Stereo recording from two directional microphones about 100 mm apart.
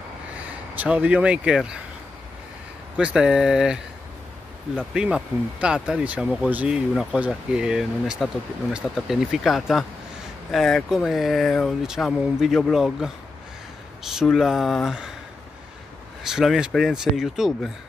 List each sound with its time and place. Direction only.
0.4 s speech: 15° right (ahead or behind)
3.0 s speech: 10° right (ahead or behind)
4.9 s speech: 10° right (ahead or behind)
16.3 s speech: 5° right (ahead or behind)